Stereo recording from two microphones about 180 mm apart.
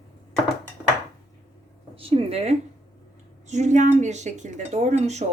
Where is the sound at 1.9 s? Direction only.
30° right (ahead or behind).